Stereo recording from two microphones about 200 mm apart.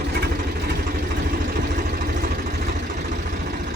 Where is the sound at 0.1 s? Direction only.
50° right (ahead or behind).